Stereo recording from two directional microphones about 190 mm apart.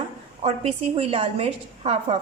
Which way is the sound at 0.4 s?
30° right (ahead or behind).